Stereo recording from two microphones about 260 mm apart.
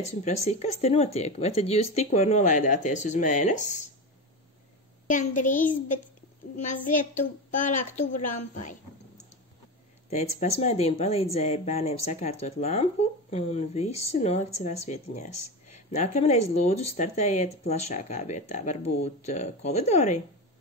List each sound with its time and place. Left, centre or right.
0.0 s speech: left
5.0 s speech: left
10.0 s speech: left